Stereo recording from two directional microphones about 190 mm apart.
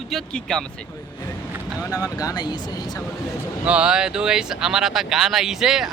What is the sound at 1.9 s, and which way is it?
Speech, 20° left (ahead or behind).